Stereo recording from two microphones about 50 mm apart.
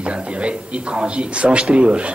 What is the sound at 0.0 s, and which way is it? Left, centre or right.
A man's voice, right.